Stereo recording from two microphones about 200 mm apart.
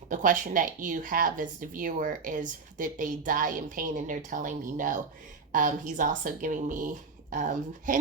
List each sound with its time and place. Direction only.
0.1 s speech: 40° right (ahead or behind)